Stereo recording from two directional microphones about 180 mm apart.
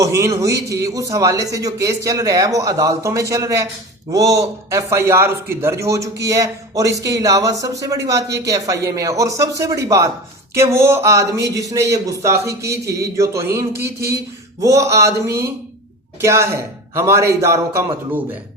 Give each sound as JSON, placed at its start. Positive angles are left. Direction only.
{"t": 0.0, "sound": "a man's voice", "side_deg": -15}